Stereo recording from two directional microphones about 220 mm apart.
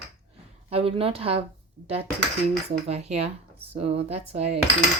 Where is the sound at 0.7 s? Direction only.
25° right (ahead or behind).